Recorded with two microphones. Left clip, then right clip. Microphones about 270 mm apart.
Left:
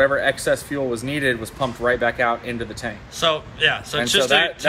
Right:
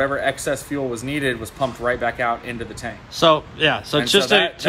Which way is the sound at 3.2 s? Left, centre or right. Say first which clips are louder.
Right 3 dB; centre.